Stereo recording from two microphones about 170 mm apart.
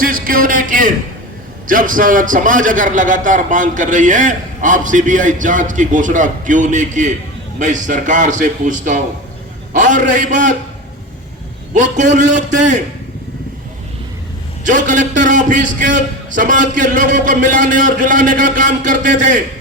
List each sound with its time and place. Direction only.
0.0 s a man's voice: 55° right (ahead or behind)
11.7 s a man's voice: 45° right (ahead or behind)
14.6 s a man's voice: 50° right (ahead or behind)